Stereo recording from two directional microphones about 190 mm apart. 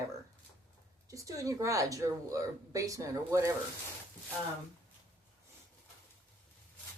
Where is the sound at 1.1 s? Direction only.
15° right (ahead or behind).